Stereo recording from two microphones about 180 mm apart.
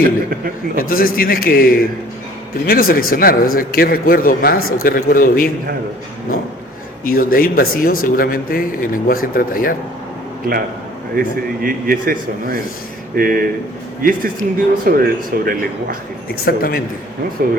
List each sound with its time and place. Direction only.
0.8 s a man's voice: 55° left (ahead or behind)
7.0 s a man's voice: 55° left (ahead or behind)
11.1 s a man's voice: 55° right (ahead or behind)
16.3 s a man's voice: 55° left (ahead or behind)
17.4 s a man's voice: 50° right (ahead or behind)